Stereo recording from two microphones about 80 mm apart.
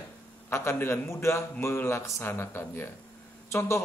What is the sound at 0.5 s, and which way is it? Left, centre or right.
A man's voice, left.